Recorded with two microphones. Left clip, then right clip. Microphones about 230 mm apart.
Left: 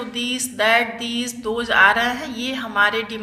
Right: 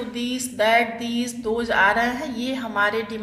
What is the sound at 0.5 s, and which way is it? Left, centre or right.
Speech, centre.